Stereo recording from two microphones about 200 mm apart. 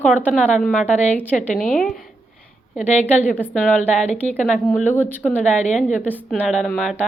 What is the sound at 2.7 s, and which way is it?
Speech, 35° left (ahead or behind).